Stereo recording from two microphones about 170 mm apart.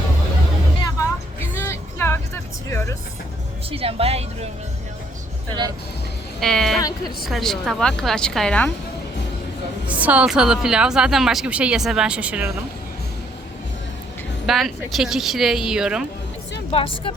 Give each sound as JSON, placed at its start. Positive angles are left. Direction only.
{"t": 1.5, "sound": "vehicle", "side_deg": 15}
{"t": 3.7, "sound": "a woman's voice", "side_deg": -35}
{"t": 6.4, "sound": "a woman's voice", "side_deg": 0}
{"t": 9.8, "sound": "a woman's voice", "side_deg": -10}
{"t": 14.4, "sound": "a woman's voice", "side_deg": 0}
{"t": 16.7, "sound": "speech", "side_deg": 30}